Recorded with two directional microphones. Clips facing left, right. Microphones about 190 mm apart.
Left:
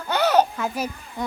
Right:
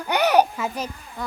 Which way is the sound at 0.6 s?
5° left (ahead or behind).